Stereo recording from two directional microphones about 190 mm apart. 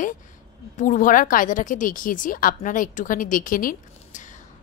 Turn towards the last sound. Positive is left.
turn(degrees=45)  # may be behind; listen again after turning